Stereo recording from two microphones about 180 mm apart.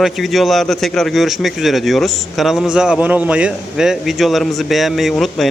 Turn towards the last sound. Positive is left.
turn(degrees=0)  # may be behind; listen again after turning